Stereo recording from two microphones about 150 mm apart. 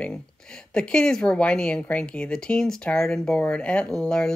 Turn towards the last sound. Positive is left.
turn(degrees=5)  # may be behind; listen again after turning